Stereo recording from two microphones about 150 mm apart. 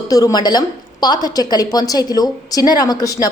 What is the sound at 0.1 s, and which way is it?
A woman's voice, 25° left (ahead or behind).